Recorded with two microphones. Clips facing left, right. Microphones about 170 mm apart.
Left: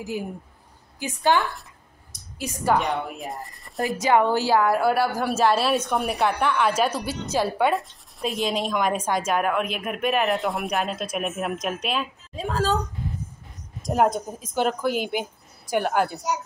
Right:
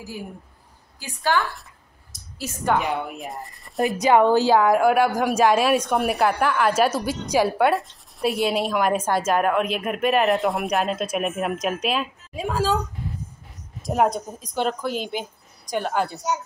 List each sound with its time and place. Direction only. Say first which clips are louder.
1.3 s a woman's voice: left 1 dB; 20° left (ahead or behind)
2.7 s a woman's voice: even; centre (ahead or behind)
3.8 s a woman's voice: right 3 dB; 20° right (ahead or behind)
5.8 s a woman's voice: right 3 dB; centre (ahead or behind)
13.8 s a woman's voice: even; centre (ahead or behind)